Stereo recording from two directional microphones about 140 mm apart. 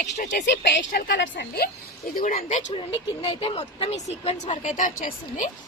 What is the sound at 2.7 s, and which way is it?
Speech, 40° left (ahead or behind).